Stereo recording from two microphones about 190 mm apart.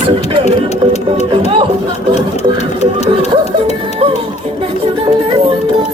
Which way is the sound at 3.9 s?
30° right (ahead or behind).